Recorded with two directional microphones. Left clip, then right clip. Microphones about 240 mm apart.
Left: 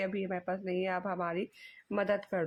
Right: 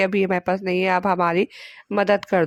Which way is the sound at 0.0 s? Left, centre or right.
Right.